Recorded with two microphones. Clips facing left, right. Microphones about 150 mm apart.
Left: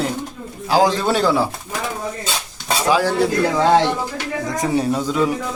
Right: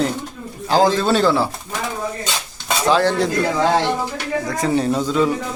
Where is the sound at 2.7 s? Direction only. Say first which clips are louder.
Right 1 dB; 10° left (ahead or behind).